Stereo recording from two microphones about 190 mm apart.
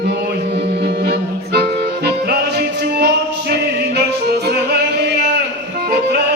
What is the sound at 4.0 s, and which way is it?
Yodeling, 60° right (ahead or behind).